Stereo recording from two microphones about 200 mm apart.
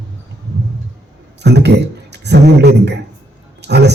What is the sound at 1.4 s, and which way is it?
A man's voice, 60° right (ahead or behind).